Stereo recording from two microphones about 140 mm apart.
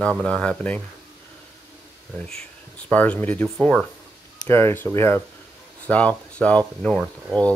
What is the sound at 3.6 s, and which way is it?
Speech, centre (ahead or behind).